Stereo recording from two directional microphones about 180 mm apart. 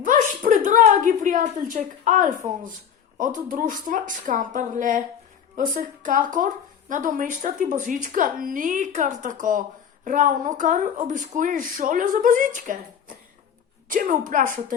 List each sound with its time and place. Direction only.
0.0 s a sound: 45° right (ahead or behind)
3.2 s speech: 45° right (ahead or behind)
13.8 s speech: 50° right (ahead or behind)